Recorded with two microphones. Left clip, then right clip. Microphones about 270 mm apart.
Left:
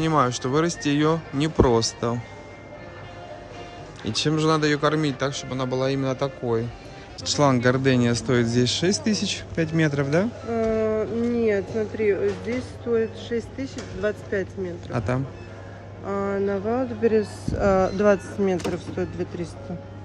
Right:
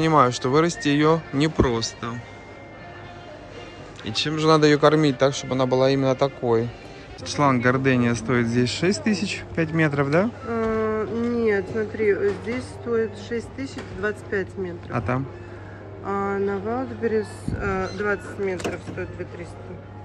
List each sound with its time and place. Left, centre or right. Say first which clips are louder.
0.0 s speech: right 3 dB; centre
1.7 s speech: left 5 dB; left
4.0 s speech: left 1 dB; left
4.5 s speech: right 7 dB; centre
17.9 s speech: left 5 dB; left